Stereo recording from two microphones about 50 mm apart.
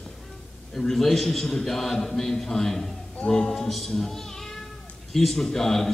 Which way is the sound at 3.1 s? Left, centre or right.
Centre.